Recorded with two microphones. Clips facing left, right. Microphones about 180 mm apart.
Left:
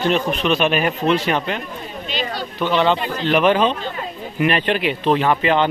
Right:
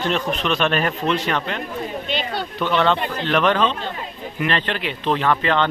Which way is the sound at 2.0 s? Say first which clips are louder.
Even; 55° right (ahead or behind).